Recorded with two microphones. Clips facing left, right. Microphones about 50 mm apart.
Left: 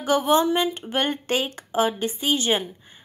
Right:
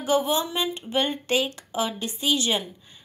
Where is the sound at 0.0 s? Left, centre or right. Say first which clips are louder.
Left 4 dB; left.